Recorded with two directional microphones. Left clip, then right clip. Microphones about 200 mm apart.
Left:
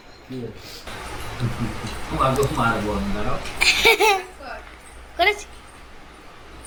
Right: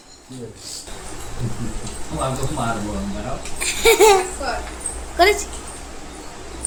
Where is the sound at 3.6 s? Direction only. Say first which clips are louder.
Right 2 dB; 15° right (ahead or behind).